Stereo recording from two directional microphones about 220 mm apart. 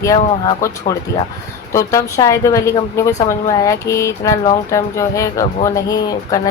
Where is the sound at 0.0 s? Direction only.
15° left (ahead or behind).